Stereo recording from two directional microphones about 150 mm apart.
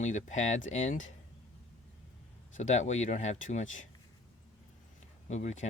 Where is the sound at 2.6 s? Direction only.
50° left (ahead or behind).